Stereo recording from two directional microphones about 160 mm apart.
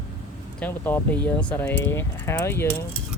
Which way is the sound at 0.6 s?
10° left (ahead or behind).